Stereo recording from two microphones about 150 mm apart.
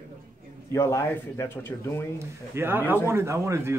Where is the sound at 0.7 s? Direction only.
20° left (ahead or behind).